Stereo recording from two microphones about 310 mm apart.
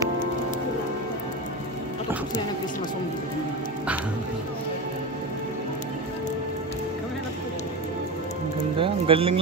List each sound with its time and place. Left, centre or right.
8.7 s speech: centre